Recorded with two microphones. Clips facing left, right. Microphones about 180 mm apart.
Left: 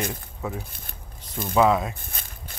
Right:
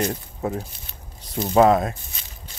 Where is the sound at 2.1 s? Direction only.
50° left (ahead or behind).